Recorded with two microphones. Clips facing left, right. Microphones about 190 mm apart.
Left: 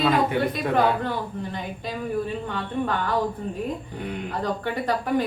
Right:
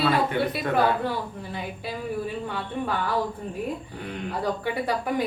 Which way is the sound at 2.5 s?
10° right (ahead or behind).